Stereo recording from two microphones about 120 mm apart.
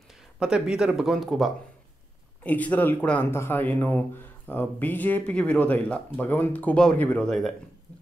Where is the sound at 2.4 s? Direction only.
10° left (ahead or behind).